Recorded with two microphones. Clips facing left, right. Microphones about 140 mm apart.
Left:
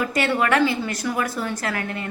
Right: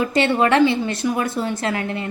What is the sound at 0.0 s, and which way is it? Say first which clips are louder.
A woman's voice: right 4 dB; 25° right (ahead or behind).